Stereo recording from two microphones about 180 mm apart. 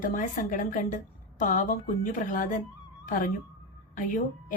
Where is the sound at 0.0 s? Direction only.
45° left (ahead or behind).